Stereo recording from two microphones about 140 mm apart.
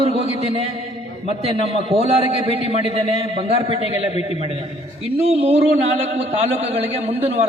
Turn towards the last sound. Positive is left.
turn(degrees=-45)  # may be behind; listen again after turning